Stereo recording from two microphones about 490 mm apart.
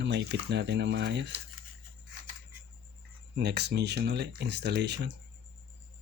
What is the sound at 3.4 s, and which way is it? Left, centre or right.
Speech, centre.